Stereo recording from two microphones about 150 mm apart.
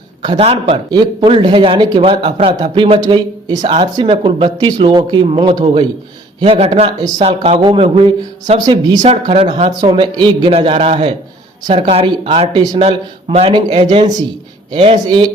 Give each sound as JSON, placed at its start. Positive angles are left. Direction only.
{"t": 0.2, "sound": "a man's voice", "side_deg": -30}
{"t": 13.6, "sound": "speech", "side_deg": -30}